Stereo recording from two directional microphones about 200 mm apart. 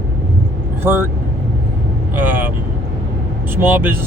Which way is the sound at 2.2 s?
10° right (ahead or behind).